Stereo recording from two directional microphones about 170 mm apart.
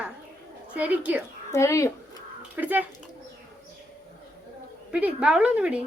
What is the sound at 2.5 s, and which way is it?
Speech, 10° right (ahead or behind).